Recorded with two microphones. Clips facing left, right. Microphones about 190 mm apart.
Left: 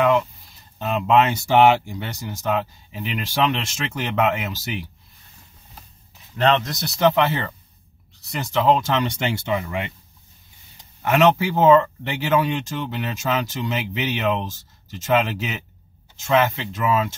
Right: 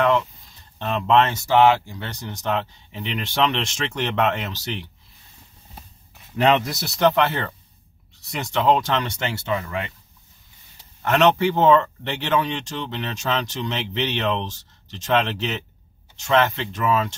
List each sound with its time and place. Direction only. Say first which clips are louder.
0.7 s speech: left 1 dB; 5° left (ahead or behind)
6.3 s speech: right 1 dB; 10° right (ahead or behind)
9.2 s speech: left 2 dB; 15° left (ahead or behind)
11.0 s speech: left 1 dB; 5° left (ahead or behind)